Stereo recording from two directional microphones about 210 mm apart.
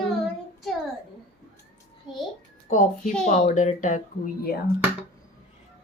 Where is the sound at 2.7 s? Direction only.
35° left (ahead or behind).